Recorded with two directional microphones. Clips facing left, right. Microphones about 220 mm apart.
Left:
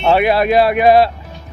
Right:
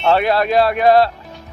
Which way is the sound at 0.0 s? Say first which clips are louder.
Left 2 dB; 10° left (ahead or behind).